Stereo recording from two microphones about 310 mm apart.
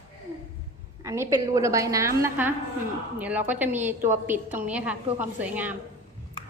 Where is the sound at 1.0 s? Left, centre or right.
Centre.